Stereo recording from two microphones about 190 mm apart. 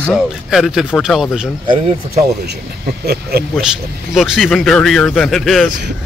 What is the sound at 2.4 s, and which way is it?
Speech, 60° right (ahead or behind).